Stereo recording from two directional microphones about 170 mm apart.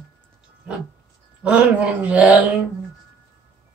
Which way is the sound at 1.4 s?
5° right (ahead or behind).